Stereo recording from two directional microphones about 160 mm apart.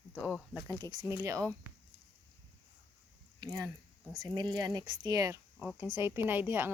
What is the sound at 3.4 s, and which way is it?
Speech, 25° right (ahead or behind).